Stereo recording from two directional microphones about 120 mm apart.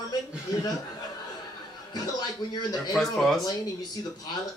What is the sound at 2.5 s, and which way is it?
Speech, 35° left (ahead or behind).